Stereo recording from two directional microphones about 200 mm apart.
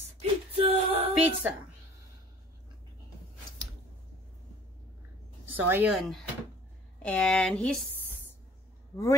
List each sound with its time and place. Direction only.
0.2 s a sound: 30° right (ahead or behind)
1.1 s a woman's voice: 5° right (ahead or behind)
5.6 s speech: 10° right (ahead or behind)